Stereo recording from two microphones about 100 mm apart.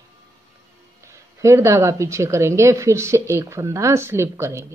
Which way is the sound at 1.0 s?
30° right (ahead or behind).